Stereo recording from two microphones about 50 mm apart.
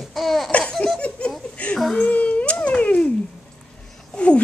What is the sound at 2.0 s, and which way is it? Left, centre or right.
Cat, left.